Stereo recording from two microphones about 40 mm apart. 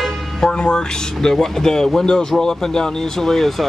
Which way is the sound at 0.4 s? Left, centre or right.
Left.